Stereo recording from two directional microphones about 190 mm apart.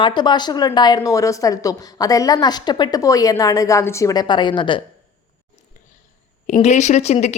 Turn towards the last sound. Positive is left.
turn(degrees=35)  # may be behind; listen again after turning